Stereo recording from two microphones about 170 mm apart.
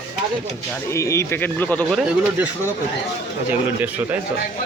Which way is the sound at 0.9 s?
15° left (ahead or behind).